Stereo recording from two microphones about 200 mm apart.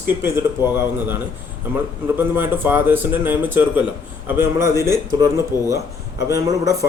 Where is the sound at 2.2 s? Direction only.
10° right (ahead or behind).